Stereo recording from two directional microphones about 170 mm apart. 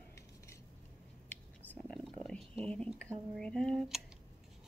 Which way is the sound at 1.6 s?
5° left (ahead or behind).